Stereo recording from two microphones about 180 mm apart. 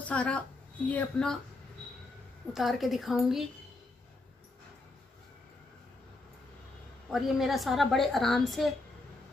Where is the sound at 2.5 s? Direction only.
Centre (ahead or behind).